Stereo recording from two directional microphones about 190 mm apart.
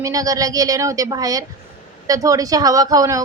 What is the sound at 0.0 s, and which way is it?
A woman's voice, 20° right (ahead or behind).